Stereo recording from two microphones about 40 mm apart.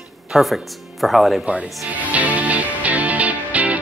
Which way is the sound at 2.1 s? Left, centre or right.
Right.